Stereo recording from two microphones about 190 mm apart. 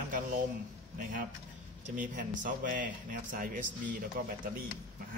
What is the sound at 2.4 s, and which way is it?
Speech, 45° right (ahead or behind).